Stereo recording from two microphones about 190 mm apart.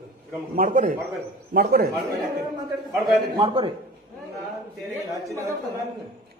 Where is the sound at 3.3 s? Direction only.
25° right (ahead or behind).